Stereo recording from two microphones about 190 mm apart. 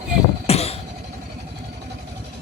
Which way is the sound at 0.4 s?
30° left (ahead or behind).